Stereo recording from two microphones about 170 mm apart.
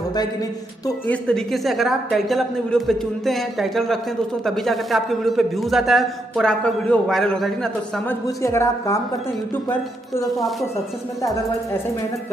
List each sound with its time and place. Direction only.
0.8 s a man's voice: 10° left (ahead or behind)
8.4 s a woman's voice: 15° left (ahead or behind)